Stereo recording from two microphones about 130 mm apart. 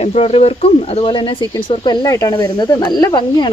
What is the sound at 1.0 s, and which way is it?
Speech, 40° left (ahead or behind).